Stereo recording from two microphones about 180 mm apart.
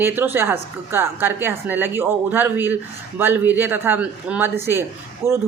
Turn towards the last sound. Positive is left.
turn(degrees=-15)  # may be behind; listen again after turning